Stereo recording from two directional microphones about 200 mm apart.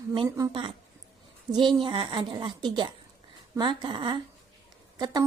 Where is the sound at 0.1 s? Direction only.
20° right (ahead or behind).